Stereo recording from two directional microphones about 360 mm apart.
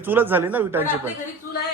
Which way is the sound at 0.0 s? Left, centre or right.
Centre.